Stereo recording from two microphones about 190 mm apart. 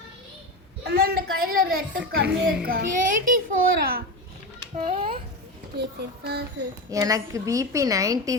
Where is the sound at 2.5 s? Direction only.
50° right (ahead or behind).